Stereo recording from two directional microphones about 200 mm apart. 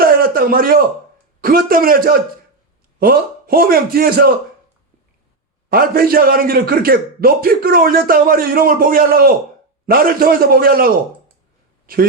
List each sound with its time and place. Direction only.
0.0 s a sound: 45° right (ahead or behind)
1.4 s a man's voice: 45° right (ahead or behind)
5.6 s a man's voice: 50° right (ahead or behind)